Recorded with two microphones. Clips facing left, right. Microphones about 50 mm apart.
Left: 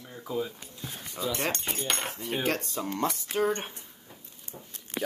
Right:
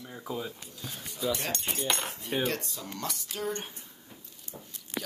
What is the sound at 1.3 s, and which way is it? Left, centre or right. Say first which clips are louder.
Speech: left 4 dB; left.